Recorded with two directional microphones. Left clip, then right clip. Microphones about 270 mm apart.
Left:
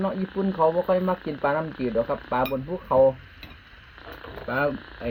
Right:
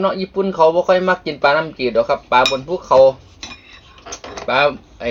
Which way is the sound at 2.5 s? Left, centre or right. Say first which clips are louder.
Right 10 dB; centre.